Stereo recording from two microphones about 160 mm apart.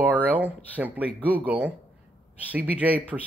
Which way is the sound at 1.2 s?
10° right (ahead or behind).